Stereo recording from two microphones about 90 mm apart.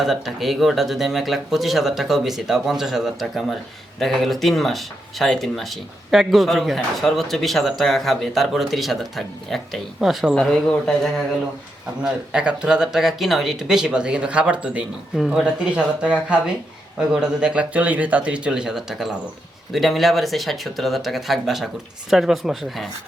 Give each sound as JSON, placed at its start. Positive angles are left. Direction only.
{"t": 0.0, "sound": "speech", "side_deg": 0}
{"t": 10.4, "sound": "speech", "side_deg": 5}
{"t": 12.3, "sound": "speech", "side_deg": -10}